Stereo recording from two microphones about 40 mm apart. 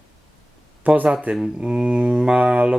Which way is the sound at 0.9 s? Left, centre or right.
Right.